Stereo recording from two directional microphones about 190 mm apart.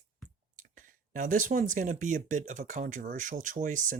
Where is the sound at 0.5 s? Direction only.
45° right (ahead or behind).